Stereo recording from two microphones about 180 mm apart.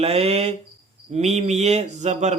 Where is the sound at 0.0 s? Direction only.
35° right (ahead or behind).